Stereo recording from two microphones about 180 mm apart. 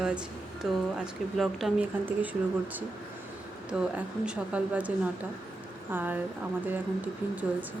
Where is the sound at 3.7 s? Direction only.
5° right (ahead or behind).